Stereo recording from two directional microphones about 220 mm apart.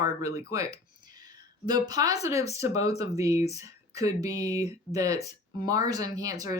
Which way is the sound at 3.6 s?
15° right (ahead or behind).